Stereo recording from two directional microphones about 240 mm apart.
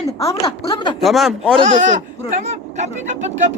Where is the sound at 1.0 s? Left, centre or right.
Centre.